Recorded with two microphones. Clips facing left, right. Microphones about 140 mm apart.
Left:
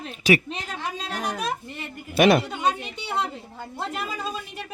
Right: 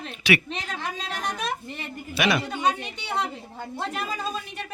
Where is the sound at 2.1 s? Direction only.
50° left (ahead or behind).